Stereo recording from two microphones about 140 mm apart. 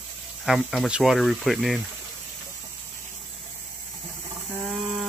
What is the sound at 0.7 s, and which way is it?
Speech, centre (ahead or behind).